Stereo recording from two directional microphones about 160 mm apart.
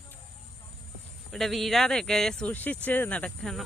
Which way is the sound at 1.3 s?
Centre (ahead or behind).